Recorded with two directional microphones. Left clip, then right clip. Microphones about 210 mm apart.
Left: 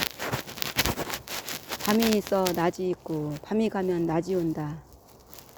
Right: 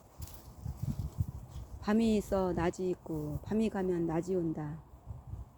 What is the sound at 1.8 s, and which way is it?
Speech, 20° left (ahead or behind).